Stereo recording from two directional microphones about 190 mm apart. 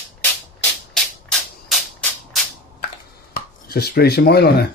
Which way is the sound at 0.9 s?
Centre (ahead or behind).